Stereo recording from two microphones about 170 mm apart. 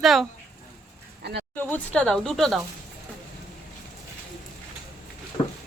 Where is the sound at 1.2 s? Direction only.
75° right (ahead or behind).